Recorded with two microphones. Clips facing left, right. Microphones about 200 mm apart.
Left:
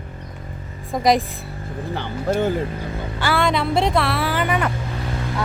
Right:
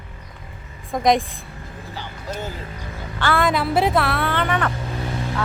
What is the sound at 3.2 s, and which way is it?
Speech, centre (ahead or behind).